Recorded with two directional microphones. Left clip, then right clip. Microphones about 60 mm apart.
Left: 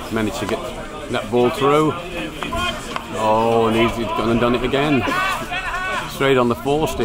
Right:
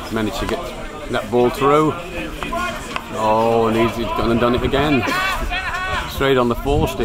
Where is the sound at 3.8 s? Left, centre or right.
Right.